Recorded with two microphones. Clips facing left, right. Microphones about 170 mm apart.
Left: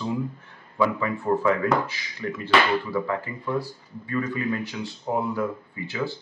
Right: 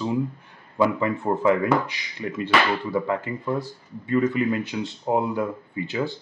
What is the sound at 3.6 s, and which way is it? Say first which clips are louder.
Speech: left 1 dB; 20° right (ahead or behind).